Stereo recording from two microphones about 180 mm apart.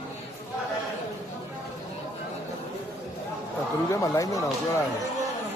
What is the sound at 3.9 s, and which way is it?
Speech, 15° left (ahead or behind).